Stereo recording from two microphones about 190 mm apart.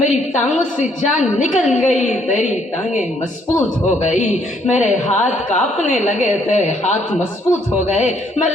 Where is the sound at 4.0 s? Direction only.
40° left (ahead or behind).